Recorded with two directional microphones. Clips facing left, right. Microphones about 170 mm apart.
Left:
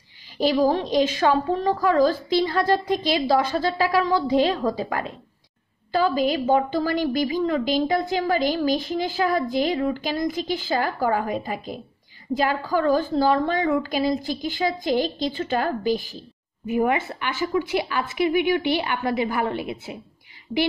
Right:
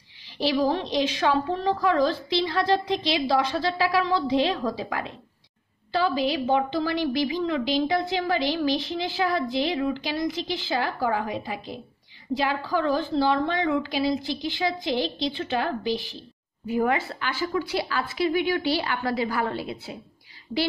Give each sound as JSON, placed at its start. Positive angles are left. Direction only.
{"t": 0.4, "sound": "a woman's voice", "side_deg": 45}
{"t": 16.6, "sound": "a woman's voice", "side_deg": 15}